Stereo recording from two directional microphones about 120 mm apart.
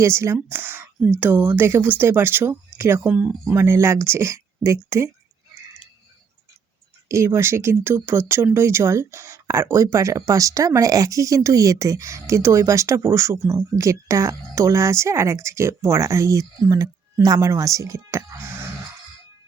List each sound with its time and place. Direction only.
0.0 s speech: 20° right (ahead or behind)
3.5 s speech: 20° right (ahead or behind)
7.1 s speech: 25° right (ahead or behind)